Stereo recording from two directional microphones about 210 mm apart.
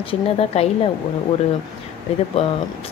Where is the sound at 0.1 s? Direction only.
30° left (ahead or behind).